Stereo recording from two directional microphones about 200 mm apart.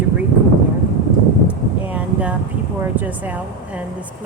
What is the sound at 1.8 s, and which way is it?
Speech, 5° right (ahead or behind).